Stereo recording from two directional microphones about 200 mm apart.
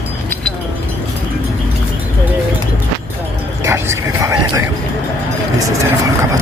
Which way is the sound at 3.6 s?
15° right (ahead or behind).